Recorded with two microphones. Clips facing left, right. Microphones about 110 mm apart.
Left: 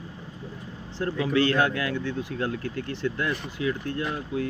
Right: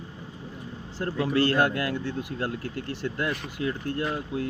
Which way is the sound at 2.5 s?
50° left (ahead or behind).